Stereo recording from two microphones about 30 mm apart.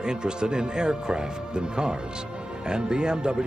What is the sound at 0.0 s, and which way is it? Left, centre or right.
A man's voice, right.